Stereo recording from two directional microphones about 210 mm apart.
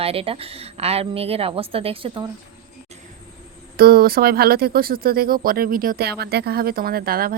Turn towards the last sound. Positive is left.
turn(degrees=-45)  # may be behind; listen again after turning